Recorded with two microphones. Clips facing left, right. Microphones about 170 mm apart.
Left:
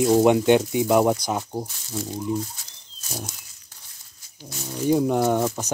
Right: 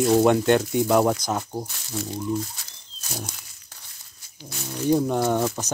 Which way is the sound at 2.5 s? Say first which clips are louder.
Right 1 dB; 75° right (ahead or behind).